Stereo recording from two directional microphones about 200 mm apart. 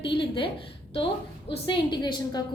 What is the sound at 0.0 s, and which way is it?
A woman's voice, 25° left (ahead or behind).